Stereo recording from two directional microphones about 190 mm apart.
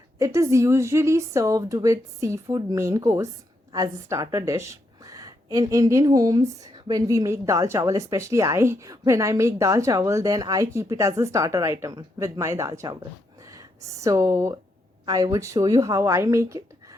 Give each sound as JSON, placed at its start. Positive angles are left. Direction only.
{"t": 0.2, "sound": "a woman's voice", "side_deg": -15}